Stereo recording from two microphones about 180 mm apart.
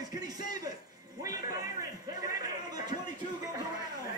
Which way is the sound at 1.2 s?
20° right (ahead or behind).